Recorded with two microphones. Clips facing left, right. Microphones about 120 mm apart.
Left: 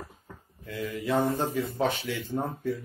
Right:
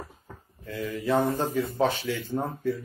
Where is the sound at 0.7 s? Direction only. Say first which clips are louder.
Right 2 dB; 30° right (ahead or behind).